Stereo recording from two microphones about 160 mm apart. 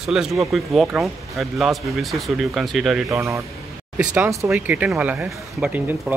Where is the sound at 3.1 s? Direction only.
20° right (ahead or behind).